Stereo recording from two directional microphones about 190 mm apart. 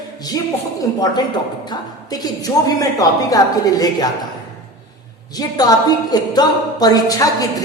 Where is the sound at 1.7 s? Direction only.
20° left (ahead or behind).